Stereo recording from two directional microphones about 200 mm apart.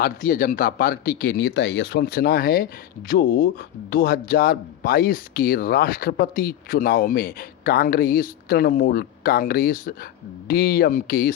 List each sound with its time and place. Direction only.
0.0 s speech: 45° left (ahead or behind)